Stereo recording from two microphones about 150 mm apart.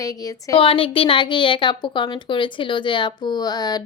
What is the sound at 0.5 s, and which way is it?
A woman's voice, 35° left (ahead or behind).